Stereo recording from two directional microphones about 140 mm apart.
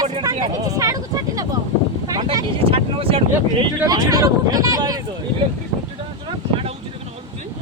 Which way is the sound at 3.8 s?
25° right (ahead or behind).